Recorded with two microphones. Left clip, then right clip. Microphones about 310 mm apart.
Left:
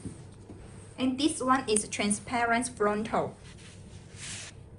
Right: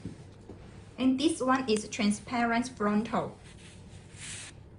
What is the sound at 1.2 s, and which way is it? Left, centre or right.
A woman's voice, left.